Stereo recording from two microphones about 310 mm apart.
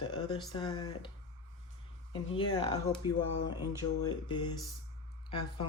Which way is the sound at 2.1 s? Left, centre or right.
Centre.